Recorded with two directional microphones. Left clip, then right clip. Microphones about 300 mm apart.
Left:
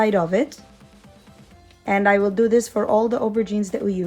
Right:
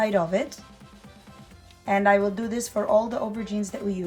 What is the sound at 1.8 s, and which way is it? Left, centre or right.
Speech, left.